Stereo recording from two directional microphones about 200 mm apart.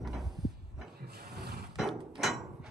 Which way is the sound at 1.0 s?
50° right (ahead or behind).